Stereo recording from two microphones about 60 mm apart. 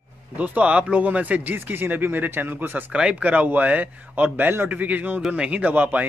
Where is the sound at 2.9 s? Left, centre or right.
Centre.